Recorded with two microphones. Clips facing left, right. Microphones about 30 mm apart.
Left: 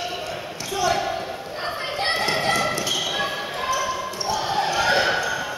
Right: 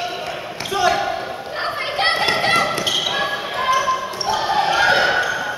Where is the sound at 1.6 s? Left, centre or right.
Right.